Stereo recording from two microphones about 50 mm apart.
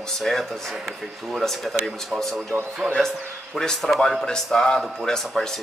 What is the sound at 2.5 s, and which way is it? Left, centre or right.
Speech, right.